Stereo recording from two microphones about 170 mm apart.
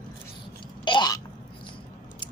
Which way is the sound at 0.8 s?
25° left (ahead or behind).